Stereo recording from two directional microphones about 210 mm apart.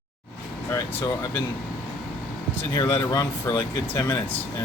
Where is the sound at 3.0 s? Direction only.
15° left (ahead or behind).